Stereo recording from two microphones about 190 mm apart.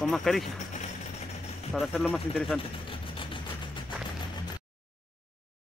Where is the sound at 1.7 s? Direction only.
Centre (ahead or behind).